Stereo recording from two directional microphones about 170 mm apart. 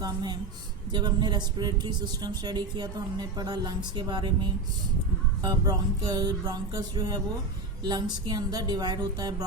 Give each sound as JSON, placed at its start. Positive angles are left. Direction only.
{"t": 0.0, "sound": "speech", "side_deg": -25}
{"t": 5.4, "sound": "speech", "side_deg": -25}